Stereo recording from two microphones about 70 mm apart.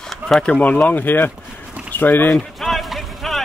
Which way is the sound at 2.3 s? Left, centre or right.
Centre.